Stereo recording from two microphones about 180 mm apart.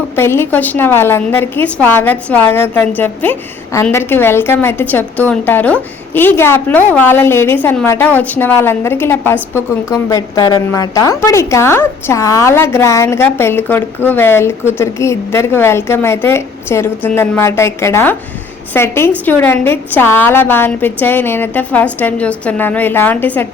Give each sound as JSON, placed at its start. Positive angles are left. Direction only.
{"t": 0.2, "sound": "a woman's voice", "side_deg": 15}